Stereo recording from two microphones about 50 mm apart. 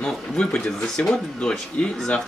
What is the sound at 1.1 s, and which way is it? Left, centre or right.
Speech, left.